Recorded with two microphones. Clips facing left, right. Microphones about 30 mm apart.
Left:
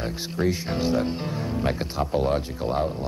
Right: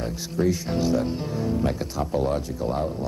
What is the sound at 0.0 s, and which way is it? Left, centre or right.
Speech, left.